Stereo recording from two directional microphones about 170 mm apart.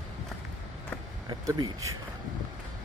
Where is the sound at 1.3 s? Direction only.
25° right (ahead or behind).